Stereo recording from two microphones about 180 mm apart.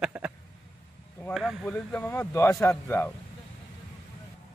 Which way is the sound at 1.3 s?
Centre (ahead or behind).